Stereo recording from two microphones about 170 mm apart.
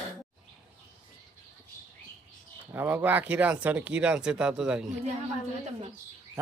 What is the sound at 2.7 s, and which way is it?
Speech, 10° right (ahead or behind).